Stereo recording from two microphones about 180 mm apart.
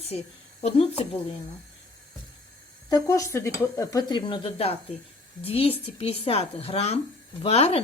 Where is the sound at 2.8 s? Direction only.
20° left (ahead or behind).